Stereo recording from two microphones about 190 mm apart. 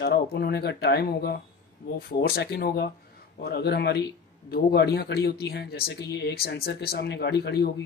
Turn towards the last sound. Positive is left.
turn(degrees=60)  # may be behind; listen again after turning